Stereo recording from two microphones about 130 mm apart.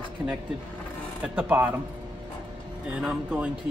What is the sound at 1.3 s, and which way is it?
Speech, 15° right (ahead or behind).